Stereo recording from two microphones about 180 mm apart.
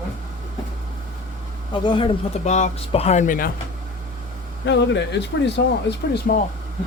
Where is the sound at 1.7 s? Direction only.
25° left (ahead or behind).